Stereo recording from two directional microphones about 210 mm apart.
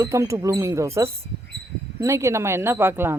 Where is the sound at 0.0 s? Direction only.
15° right (ahead or behind).